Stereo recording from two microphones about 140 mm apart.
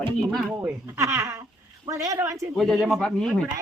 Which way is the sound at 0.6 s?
20° right (ahead or behind).